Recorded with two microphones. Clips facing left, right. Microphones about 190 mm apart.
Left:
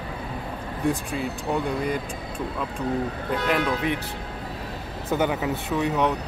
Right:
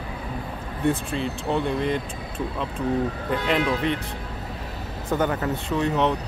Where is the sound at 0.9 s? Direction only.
5° left (ahead or behind).